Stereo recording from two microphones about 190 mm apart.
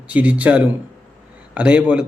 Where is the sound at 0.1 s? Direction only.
5° right (ahead or behind).